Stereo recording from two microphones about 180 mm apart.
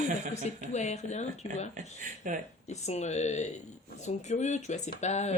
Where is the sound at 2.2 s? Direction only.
45° right (ahead or behind).